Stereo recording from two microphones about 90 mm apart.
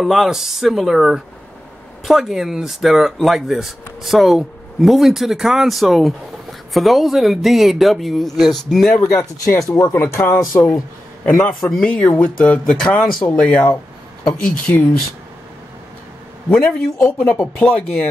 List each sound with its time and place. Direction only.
0.0 s speech: 5° right (ahead or behind)
9.7 s speech: 40° left (ahead or behind)
11.2 s speech: 10° left (ahead or behind)
16.4 s speech: 15° left (ahead or behind)